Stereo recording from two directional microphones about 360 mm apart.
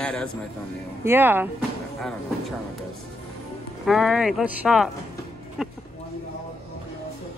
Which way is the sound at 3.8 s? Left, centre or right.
Centre.